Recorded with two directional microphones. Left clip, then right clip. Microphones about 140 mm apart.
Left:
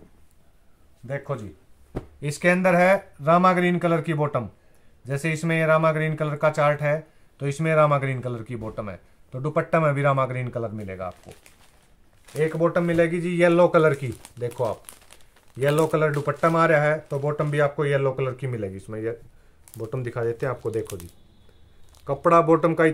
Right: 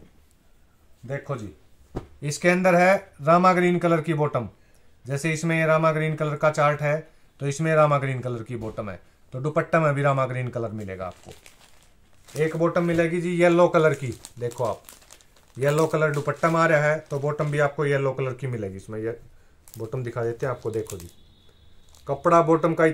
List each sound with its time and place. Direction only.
1.0 s speech: centre (ahead or behind)
12.3 s speech: 5° left (ahead or behind); by 14.1 s 30° left (ahead or behind)
15.6 s speech: 25° left (ahead or behind)
22.0 s speech: 25° left (ahead or behind)